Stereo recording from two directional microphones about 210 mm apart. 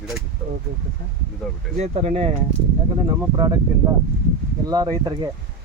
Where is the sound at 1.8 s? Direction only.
30° right (ahead or behind).